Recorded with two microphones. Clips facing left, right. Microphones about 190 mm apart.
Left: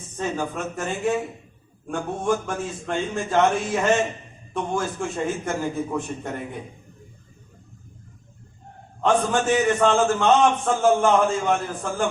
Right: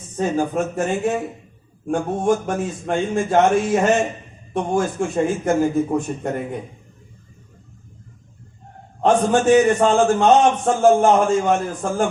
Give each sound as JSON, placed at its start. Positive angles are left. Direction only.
{"t": 0.2, "sound": "a man's voice", "side_deg": -45}
{"t": 9.0, "sound": "a man's voice", "side_deg": -40}